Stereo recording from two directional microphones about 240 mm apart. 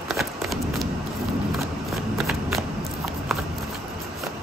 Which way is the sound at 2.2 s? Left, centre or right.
Centre.